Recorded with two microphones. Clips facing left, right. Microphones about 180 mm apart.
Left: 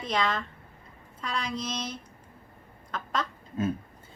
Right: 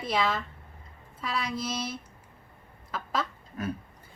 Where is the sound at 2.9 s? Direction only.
5° right (ahead or behind).